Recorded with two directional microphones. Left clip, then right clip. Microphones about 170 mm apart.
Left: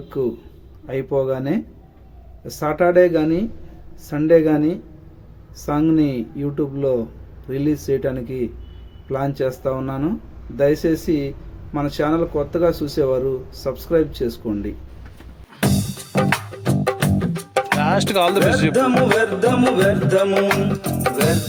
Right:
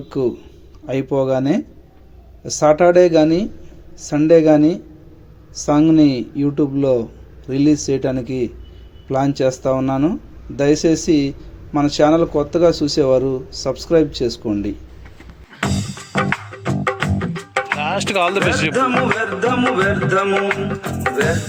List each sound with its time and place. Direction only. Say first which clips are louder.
0.9 s speech: right 3 dB; 10° right (ahead or behind)
15.6 s music: even; 20° left (ahead or behind)
17.7 s music: left 1 dB; centre (ahead or behind)
18.7 s music: left 1 dB; 25° left (ahead or behind)